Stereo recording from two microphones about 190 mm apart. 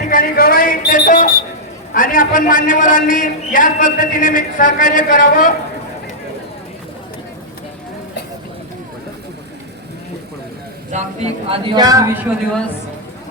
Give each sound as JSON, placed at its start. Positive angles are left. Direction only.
{"t": 0.0, "sound": "a man's voice", "side_deg": 50}
{"t": 10.9, "sound": "speech", "side_deg": -35}